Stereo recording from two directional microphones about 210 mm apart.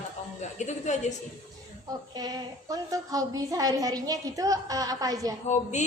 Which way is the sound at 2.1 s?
15° right (ahead or behind).